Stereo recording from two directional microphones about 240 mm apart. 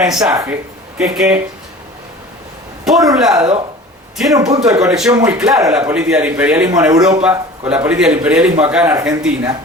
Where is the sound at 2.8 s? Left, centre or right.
Centre.